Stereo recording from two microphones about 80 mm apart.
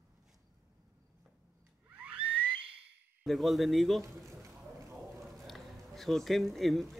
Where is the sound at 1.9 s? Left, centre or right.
Centre.